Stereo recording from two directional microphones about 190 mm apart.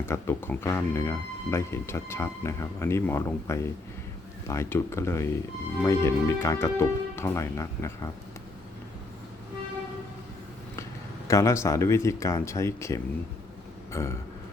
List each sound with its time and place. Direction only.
0.0 s speech: 10° left (ahead or behind)
11.3 s speech: 15° left (ahead or behind)